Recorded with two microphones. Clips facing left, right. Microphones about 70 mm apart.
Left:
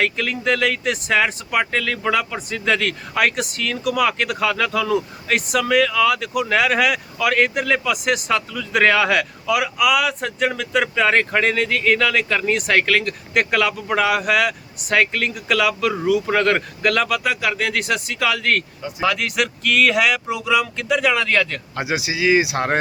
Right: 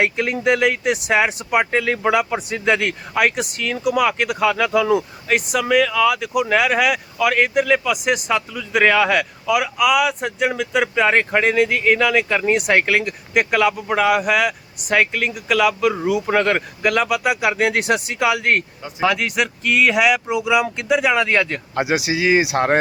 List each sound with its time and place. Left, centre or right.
0.0 s speech: right
17.4 s speech: right
21.9 s speech: right
22.2 s speech: right